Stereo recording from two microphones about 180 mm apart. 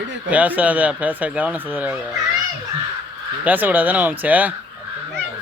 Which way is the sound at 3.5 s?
10° right (ahead or behind).